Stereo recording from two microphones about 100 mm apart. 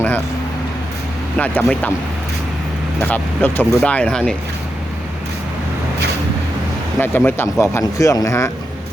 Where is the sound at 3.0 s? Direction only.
20° left (ahead or behind).